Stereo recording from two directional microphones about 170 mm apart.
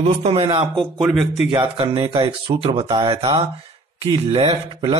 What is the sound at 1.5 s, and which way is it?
A man's voice, 30° right (ahead or behind).